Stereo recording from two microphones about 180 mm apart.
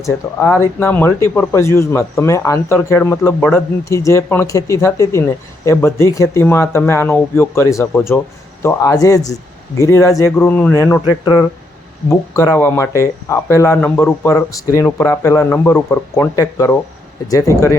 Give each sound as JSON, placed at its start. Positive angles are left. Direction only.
{"t": 0.0, "sound": "a man's voice", "side_deg": 15}